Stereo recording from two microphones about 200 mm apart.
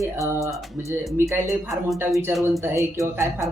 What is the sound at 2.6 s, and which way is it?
Speech, 15° right (ahead or behind).